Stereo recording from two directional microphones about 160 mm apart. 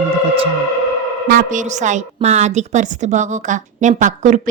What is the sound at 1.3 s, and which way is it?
A woman's voice, 55° right (ahead or behind).